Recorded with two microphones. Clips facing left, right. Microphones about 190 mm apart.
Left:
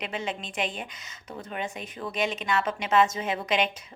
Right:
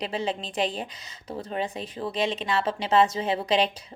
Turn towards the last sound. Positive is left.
turn(degrees=-35)  # may be behind; listen again after turning